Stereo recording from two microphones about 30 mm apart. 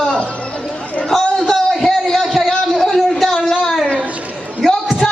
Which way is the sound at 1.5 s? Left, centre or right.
Centre.